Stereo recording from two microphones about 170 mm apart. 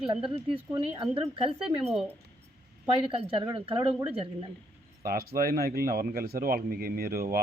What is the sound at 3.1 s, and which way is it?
Speech, 35° right (ahead or behind).